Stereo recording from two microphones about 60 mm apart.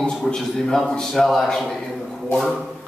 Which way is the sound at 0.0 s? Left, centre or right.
Centre.